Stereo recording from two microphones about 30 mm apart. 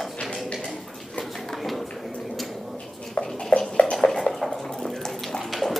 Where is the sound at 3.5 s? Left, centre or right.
Left.